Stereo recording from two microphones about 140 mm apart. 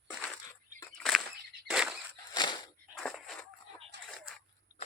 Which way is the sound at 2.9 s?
Centre (ahead or behind).